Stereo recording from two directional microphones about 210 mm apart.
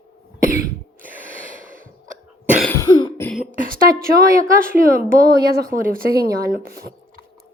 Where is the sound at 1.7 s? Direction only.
40° right (ahead or behind).